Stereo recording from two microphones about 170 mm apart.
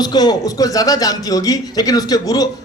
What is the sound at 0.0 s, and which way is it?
A man's voice, 25° left (ahead or behind).